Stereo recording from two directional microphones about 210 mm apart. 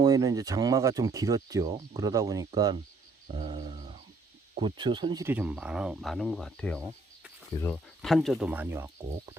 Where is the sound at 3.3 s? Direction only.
25° right (ahead or behind).